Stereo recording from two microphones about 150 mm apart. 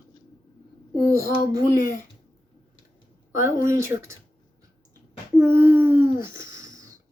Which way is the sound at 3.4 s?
20° right (ahead or behind).